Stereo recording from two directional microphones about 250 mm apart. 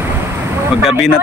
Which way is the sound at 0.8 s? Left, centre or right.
Centre.